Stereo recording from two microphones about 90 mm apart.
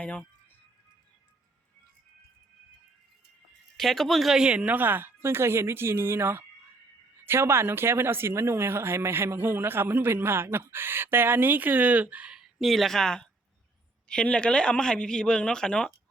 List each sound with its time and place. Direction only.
0.0 s speech: 15° left (ahead or behind)
3.8 s speech: 5° left (ahead or behind)